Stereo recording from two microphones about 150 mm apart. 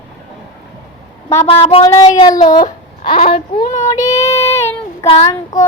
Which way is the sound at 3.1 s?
40° left (ahead or behind).